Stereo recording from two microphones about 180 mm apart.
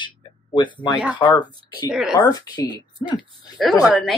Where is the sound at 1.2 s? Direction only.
25° left (ahead or behind).